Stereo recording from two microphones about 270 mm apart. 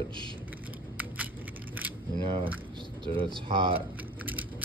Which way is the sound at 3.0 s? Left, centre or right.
Centre.